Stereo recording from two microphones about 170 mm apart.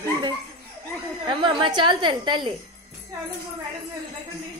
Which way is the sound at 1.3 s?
30° right (ahead or behind).